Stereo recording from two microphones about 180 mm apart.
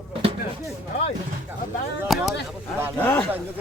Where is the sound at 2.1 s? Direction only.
Centre (ahead or behind).